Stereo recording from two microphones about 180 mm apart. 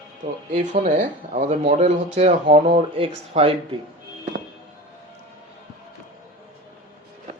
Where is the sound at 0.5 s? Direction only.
45° right (ahead or behind).